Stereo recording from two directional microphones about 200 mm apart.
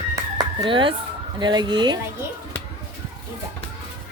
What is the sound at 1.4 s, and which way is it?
Speech, 20° right (ahead or behind).